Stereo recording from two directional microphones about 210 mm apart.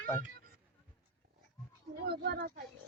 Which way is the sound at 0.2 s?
45° right (ahead or behind).